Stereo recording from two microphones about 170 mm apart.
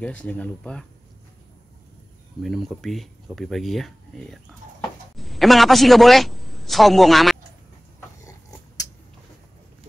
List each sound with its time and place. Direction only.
0.0 s speech: 10° left (ahead or behind)
2.4 s a man's voice: centre (ahead or behind)
8.2 s dog: 20° left (ahead or behind)